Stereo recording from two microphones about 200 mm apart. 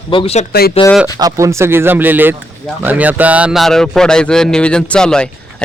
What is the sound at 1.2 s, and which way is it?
Speech, 15° right (ahead or behind).